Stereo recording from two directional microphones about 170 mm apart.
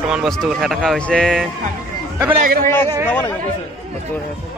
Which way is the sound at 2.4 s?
55° right (ahead or behind).